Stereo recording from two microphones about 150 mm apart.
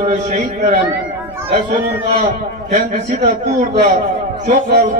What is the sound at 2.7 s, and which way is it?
Speech, 55° right (ahead or behind).